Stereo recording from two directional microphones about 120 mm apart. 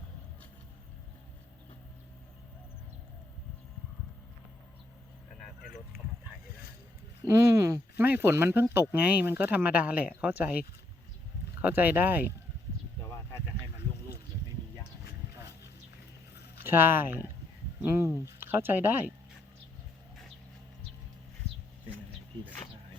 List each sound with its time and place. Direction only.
7.3 s speech: 25° right (ahead or behind)
11.6 s speech: 15° right (ahead or behind)
16.6 s speech: 20° right (ahead or behind)